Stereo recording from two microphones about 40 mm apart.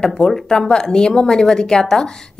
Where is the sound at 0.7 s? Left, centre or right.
Centre.